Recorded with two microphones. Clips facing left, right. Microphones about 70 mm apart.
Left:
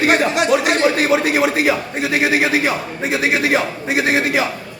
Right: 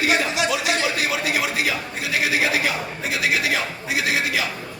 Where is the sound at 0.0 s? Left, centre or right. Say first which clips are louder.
Left 6 dB; left.